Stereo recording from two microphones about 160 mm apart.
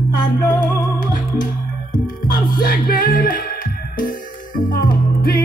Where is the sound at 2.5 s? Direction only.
65° left (ahead or behind).